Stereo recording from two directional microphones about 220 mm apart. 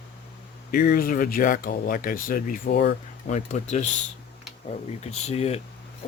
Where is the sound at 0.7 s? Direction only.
40° left (ahead or behind).